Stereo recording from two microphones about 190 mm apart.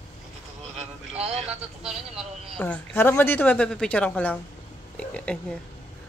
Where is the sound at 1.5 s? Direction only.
5° right (ahead or behind).